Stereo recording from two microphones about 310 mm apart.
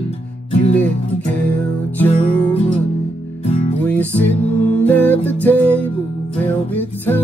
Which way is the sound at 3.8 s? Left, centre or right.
Centre.